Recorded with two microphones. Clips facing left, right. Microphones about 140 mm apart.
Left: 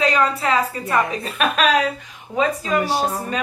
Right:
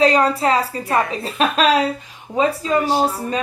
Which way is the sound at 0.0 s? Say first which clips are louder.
Right 4 dB; 35° right (ahead or behind).